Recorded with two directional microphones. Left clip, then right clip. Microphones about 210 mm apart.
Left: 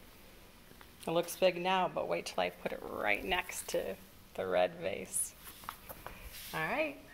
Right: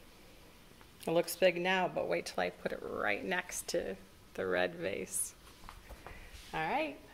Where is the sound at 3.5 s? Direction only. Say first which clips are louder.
Even; 15° right (ahead or behind).